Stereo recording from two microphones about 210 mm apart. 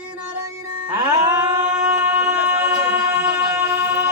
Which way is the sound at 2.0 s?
10° right (ahead or behind).